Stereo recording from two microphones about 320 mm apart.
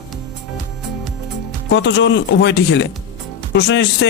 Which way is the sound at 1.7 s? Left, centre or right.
Left.